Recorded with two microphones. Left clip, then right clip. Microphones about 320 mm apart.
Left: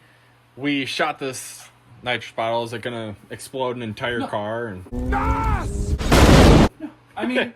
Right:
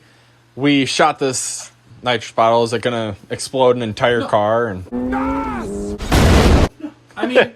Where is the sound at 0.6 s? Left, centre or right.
Centre.